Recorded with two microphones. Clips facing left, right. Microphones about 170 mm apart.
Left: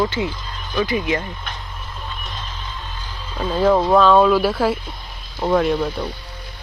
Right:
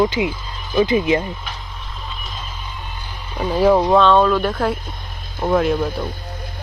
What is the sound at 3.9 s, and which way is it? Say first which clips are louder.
Speech: even; 5° left (ahead or behind).